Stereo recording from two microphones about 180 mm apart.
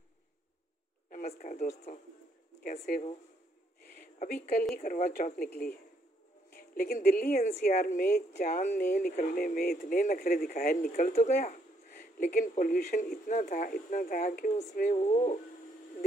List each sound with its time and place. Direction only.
1.1 s speech: 50° left (ahead or behind)
2.6 s speech: 55° left (ahead or behind)
4.0 s speech: 50° left (ahead or behind)
6.5 s a woman's voice: 55° left (ahead or behind)
7.4 s speech: 40° left (ahead or behind)